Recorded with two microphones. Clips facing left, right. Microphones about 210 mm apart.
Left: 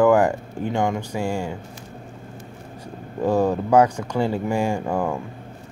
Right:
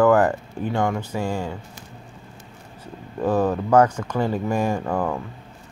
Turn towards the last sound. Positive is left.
turn(degrees=10)  # may be behind; listen again after turning